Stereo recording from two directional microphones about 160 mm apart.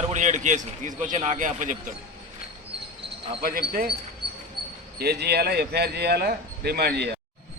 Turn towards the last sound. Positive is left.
turn(degrees=-90)